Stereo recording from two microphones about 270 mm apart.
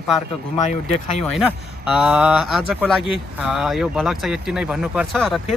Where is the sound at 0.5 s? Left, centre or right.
Left.